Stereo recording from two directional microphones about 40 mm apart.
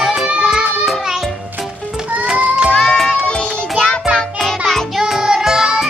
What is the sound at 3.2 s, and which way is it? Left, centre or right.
Music, left.